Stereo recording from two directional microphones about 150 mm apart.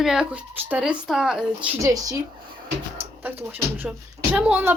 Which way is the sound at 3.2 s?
10° right (ahead or behind).